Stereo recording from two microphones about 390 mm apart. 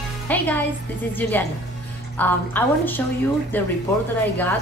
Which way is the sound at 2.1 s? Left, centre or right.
Centre.